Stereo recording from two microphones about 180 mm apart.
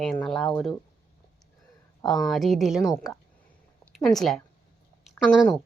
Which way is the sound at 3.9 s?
Centre (ahead or behind).